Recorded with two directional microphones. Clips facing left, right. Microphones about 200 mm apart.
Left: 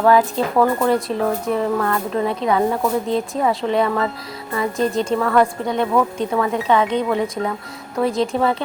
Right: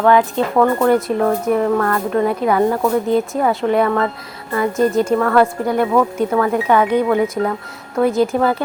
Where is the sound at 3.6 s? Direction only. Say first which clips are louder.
Right 3 dB; 30° left (ahead or behind).